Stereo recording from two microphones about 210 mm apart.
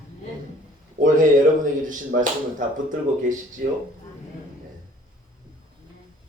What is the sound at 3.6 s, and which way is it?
Speech, 45° right (ahead or behind).